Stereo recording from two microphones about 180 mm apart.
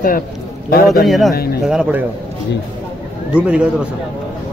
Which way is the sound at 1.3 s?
60° left (ahead or behind).